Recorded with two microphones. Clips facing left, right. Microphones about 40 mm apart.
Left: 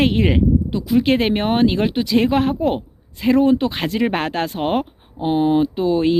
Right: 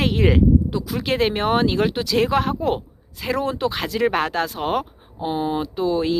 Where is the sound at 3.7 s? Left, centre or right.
Left.